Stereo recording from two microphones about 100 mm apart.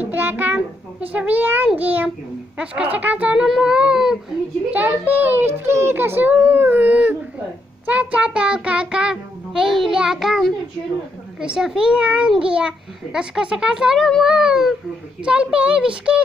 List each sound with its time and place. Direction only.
0.0 s a sound: 20° right (ahead or behind)
1.1 s child singing: 15° right (ahead or behind)
4.7 s a child's voice: 15° right (ahead or behind)
7.8 s child singing: 15° right (ahead or behind)